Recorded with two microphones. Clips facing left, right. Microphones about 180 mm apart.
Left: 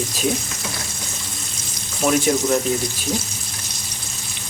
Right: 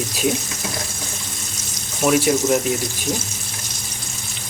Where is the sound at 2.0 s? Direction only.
5° right (ahead or behind).